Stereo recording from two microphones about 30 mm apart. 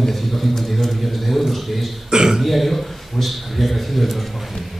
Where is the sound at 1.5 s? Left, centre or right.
Centre.